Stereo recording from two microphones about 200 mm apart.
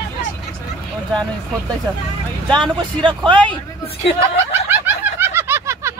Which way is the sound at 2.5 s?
25° right (ahead or behind).